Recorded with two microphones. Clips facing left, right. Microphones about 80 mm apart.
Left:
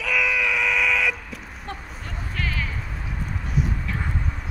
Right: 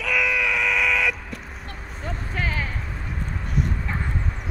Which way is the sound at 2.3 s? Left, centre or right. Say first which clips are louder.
Right 2 dB; right.